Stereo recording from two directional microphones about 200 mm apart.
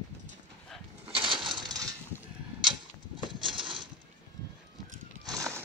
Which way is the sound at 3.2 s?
25° right (ahead or behind).